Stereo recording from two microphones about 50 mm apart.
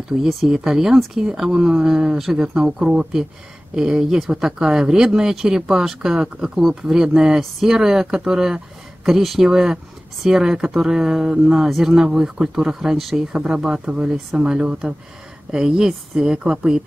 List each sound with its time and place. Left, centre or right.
0.2 s speech: centre